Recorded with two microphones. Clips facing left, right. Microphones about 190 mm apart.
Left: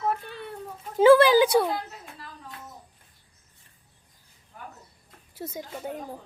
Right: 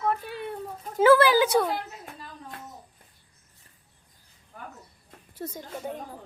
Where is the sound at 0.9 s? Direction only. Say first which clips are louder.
Left 3 dB; 15° left (ahead or behind).